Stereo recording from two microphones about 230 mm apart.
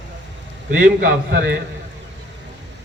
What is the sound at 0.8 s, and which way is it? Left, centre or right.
Speech, right.